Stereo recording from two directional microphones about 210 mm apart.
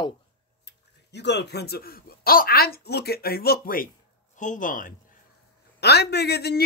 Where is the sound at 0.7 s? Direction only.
55° left (ahead or behind).